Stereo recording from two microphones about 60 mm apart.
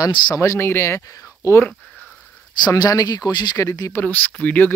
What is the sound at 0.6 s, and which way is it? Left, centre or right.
Speech, left.